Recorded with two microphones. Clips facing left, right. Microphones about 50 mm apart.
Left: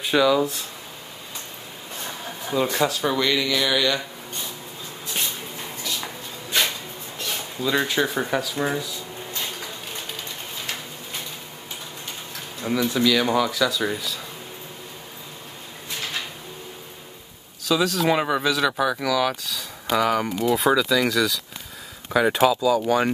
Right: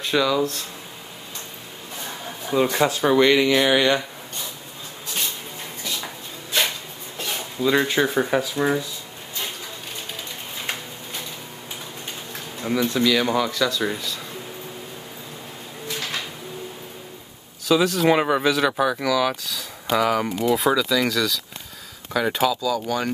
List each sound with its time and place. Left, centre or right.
0.0 s speech: centre
2.5 s speech: centre; by 4.0 s right
7.6 s speech: centre
12.6 s speech: centre
17.6 s speech: centre
22.5 s speech: left